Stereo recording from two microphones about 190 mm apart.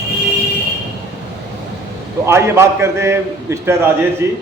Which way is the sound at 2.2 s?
15° right (ahead or behind).